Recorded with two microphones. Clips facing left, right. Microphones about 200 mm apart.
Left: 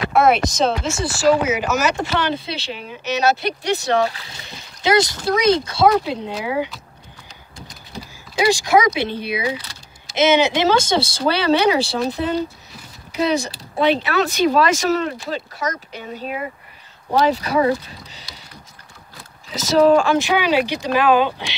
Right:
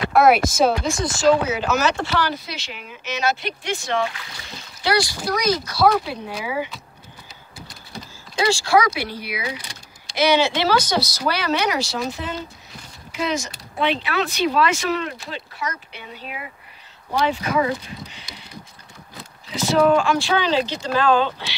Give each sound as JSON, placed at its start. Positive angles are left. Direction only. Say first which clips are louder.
{"t": 0.1, "sound": "speech", "louder": "right 1 dB", "side_deg": 0}
{"t": 4.8, "sound": "speech", "louder": "left 4 dB", "side_deg": 20}
{"t": 8.4, "sound": "speech", "louder": "left 2 dB", "side_deg": 15}
{"t": 19.5, "sound": "speech", "louder": "left 3 dB", "side_deg": 40}
{"t": 20.2, "sound": "speech", "louder": "left 3 dB", "side_deg": 15}